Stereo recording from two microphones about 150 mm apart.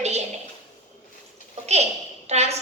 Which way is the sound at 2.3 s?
45° right (ahead or behind).